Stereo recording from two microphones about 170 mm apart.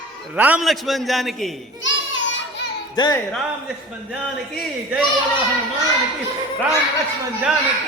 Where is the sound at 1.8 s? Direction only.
90° left.